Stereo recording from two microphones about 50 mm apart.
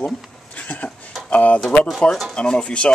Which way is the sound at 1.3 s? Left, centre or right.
Left.